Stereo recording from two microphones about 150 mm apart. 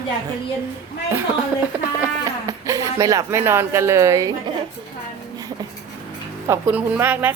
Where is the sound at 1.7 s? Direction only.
10° right (ahead or behind).